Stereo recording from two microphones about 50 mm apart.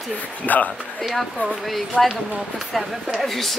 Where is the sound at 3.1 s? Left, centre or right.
Centre.